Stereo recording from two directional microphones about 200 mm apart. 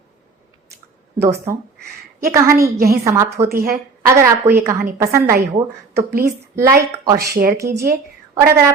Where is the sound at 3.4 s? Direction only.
50° right (ahead or behind).